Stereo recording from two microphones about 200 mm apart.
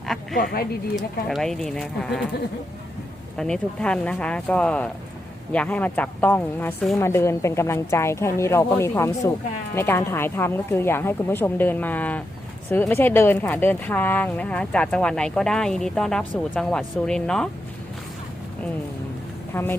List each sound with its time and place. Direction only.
0.3 s speech: 50° left (ahead or behind)
1.3 s speech: centre (ahead or behind)
3.3 s a woman's voice: 5° left (ahead or behind)
19.5 s a woman's voice: 10° left (ahead or behind)